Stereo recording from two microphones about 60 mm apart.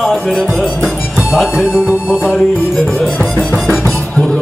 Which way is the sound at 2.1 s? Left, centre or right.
Centre.